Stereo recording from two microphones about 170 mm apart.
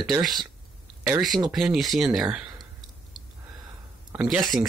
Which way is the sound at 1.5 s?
Centre (ahead or behind).